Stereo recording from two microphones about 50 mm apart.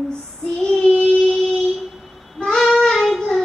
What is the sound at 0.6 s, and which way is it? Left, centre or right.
Child singing, centre.